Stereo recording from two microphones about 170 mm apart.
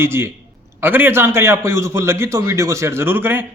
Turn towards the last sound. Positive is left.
turn(degrees=-10)  # may be behind; listen again after turning